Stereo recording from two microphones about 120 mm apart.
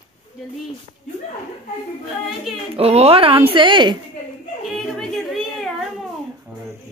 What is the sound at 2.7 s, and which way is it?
A woman's voice, 60° right (ahead or behind).